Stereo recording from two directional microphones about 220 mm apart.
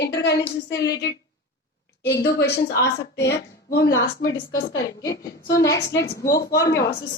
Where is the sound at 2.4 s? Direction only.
50° left (ahead or behind).